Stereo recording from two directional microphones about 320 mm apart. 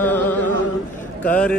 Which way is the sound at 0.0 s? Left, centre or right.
Centre.